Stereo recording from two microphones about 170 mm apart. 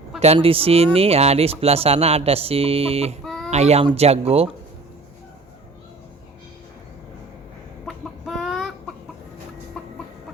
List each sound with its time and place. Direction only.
0.3 s speech: 35° right (ahead or behind)
3.2 s a sound: centre (ahead or behind)
3.5 s speech: 40° right (ahead or behind)
7.9 s chicken: centre (ahead or behind)
9.8 s chicken: 5° left (ahead or behind)